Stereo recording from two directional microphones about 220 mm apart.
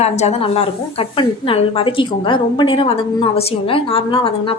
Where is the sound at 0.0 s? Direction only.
30° left (ahead or behind).